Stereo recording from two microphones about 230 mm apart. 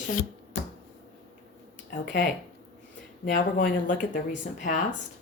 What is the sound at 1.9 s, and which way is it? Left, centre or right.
Speech, left.